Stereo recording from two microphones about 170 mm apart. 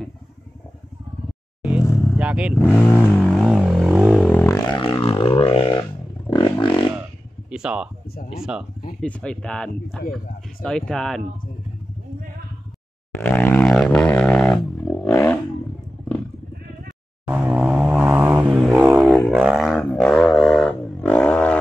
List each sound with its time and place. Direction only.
1.6 s vehicle: 5° right (ahead or behind)
2.1 s speech: 5° right (ahead or behind)
2.6 s vehicle: 10° left (ahead or behind)
4.7 s music: 30° left (ahead or behind)
6.3 s a sound: 30° left (ahead or behind)
7.5 s speech: 5° right (ahead or behind)
9.0 s speech: 5° left (ahead or behind)
13.1 s didgeridoo: 10° left (ahead or behind)
17.3 s vehicle: 10° right (ahead or behind)
19.1 s didgeridoo: centre (ahead or behind)